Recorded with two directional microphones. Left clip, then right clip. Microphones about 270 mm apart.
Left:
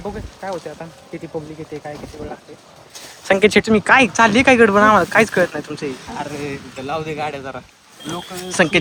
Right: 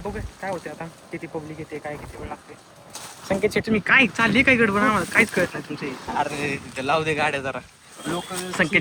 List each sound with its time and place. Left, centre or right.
0.4 s speech: centre
3.2 s speech: left
3.7 s speech: centre